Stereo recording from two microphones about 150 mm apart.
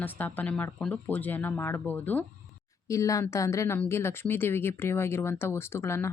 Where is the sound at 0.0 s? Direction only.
10° left (ahead or behind).